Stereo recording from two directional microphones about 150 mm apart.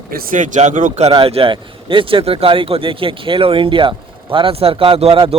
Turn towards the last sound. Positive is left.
turn(degrees=-40)  # may be behind; listen again after turning